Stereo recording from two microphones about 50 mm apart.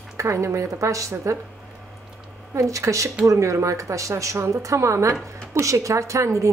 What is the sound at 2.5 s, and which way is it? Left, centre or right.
A woman's voice, right.